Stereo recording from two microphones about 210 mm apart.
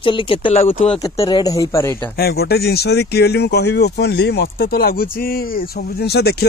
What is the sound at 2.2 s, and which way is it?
Speech, 50° left (ahead or behind).